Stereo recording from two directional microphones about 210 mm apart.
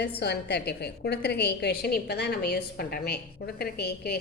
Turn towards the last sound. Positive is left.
turn(degrees=50)  # may be behind; listen again after turning